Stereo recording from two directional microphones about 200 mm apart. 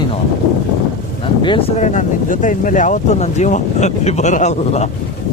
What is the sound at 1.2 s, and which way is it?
Speech, 25° left (ahead or behind).